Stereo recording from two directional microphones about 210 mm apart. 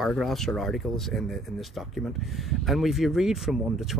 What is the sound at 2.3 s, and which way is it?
Speech, centre (ahead or behind).